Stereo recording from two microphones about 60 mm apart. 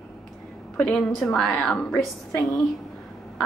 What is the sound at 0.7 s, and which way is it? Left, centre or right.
Speech, centre.